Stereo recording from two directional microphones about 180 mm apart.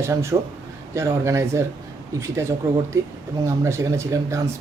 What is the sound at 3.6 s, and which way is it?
Speech, 15° right (ahead or behind).